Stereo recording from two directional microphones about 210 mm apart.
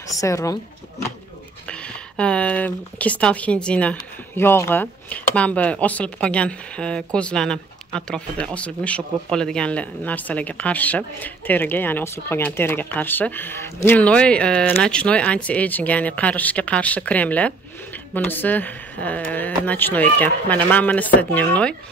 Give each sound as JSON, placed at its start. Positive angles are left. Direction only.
{"t": 0.1, "sound": "speech", "side_deg": 15}
{"t": 1.7, "sound": "speech", "side_deg": 5}